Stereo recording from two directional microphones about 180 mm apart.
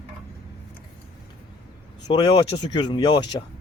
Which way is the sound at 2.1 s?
25° left (ahead or behind).